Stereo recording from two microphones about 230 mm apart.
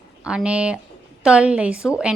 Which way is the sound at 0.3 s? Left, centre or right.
Centre.